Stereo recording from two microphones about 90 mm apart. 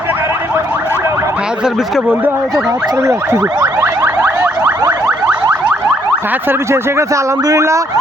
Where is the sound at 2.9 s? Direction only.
35° right (ahead or behind).